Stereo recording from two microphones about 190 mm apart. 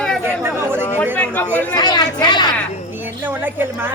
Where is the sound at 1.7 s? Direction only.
20° left (ahead or behind).